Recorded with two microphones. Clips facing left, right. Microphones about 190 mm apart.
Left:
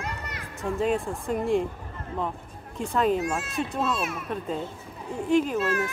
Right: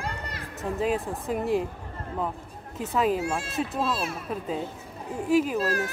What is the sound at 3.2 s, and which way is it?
Speech, 30° right (ahead or behind).